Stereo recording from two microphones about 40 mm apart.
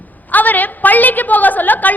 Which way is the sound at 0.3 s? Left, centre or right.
Left.